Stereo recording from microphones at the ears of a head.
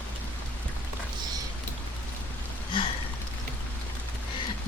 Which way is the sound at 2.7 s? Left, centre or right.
Left.